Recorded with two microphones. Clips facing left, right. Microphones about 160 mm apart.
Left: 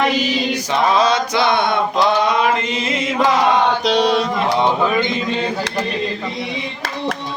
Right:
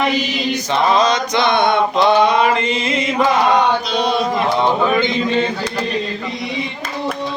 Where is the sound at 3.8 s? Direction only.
80° left.